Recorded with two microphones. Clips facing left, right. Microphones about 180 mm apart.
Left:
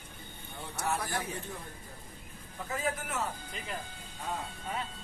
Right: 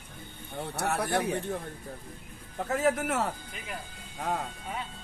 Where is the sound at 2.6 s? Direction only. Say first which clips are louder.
Right 8 dB; 65° right (ahead or behind).